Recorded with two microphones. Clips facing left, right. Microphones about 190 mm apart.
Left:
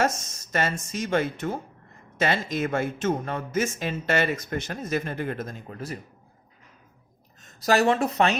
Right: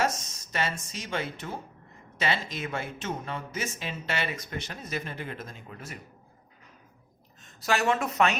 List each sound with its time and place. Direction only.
0.5 s speech: 50° left (ahead or behind)
7.4 s a woman's voice: 40° left (ahead or behind)